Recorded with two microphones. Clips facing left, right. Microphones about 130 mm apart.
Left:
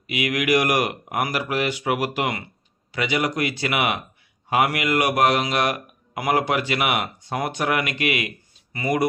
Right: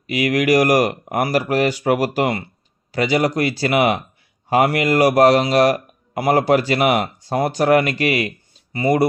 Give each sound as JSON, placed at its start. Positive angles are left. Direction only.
{"t": 0.0, "sound": "a man's voice", "side_deg": -40}